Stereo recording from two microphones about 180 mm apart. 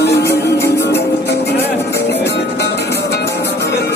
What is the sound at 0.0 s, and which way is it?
Music, 65° left (ahead or behind).